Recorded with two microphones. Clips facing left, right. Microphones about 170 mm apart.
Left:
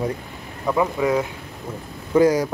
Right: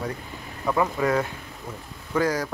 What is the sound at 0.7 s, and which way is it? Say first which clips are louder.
Speech: left 3 dB; 10° left (ahead or behind).